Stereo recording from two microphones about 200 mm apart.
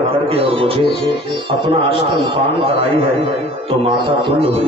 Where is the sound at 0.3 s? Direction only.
30° right (ahead or behind).